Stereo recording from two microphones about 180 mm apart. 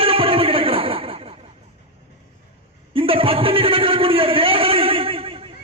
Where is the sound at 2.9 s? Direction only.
30° right (ahead or behind).